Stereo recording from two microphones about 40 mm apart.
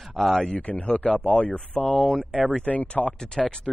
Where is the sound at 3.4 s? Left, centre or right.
Centre.